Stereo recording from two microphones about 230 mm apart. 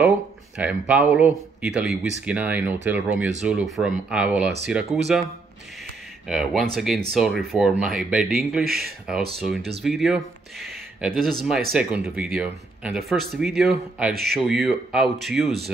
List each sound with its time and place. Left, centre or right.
0.6 s speech: centre
6.2 s speech: centre
8.6 s speech: right
9.6 s speech: right
9.8 s speech: centre
14.1 s speech: right
14.4 s speech: centre